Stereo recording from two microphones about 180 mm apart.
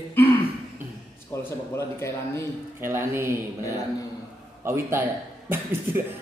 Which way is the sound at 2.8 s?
15° right (ahead or behind).